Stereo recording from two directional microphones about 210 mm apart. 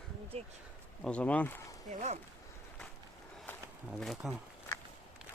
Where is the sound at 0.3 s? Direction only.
30° right (ahead or behind).